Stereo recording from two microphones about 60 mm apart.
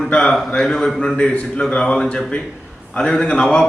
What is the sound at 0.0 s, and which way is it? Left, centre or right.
A man's voice, centre.